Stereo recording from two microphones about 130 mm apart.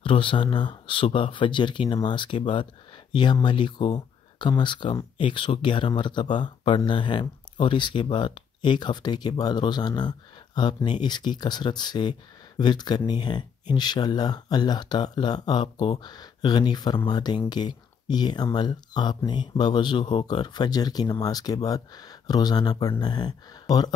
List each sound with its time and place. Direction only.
0.0 s speech: 40° left (ahead or behind)